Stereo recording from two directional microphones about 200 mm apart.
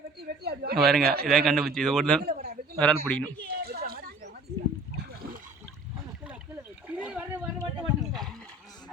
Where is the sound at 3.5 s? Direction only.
50° right (ahead or behind).